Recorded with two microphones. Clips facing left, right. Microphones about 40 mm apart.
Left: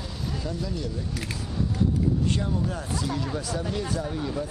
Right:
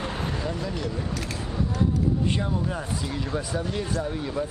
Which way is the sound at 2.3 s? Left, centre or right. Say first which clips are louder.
Right 1 dB; centre.